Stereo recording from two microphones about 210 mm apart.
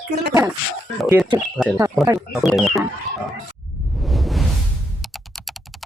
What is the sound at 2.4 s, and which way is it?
Speech, centre (ahead or behind).